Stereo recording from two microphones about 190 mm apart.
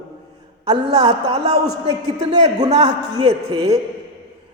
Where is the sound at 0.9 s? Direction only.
30° right (ahead or behind).